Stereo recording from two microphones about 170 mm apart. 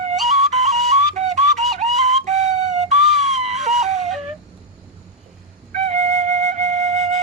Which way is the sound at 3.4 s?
40° right (ahead or behind).